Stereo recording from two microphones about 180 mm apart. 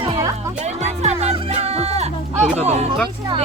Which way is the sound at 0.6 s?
40° right (ahead or behind).